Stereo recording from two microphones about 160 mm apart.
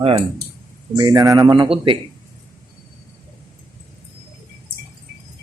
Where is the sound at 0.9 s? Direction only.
25° right (ahead or behind).